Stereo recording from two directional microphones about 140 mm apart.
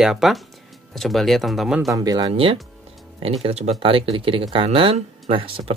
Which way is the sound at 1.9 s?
25° right (ahead or behind).